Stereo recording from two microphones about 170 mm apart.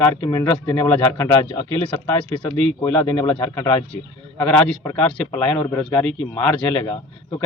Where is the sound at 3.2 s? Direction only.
35° left (ahead or behind).